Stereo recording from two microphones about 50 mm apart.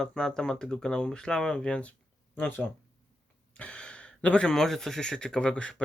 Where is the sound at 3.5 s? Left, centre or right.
Left.